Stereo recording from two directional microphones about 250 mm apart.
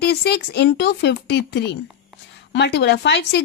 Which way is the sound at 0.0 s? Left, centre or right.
Left.